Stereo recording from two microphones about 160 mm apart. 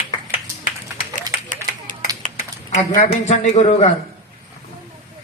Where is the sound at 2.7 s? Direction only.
45° left (ahead or behind).